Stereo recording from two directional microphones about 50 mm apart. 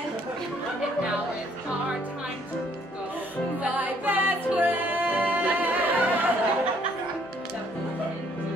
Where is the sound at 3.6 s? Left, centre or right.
Right.